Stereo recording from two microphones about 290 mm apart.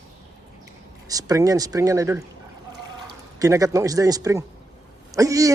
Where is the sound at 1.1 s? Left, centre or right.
Centre.